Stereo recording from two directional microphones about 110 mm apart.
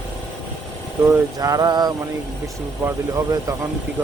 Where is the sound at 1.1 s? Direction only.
30° right (ahead or behind).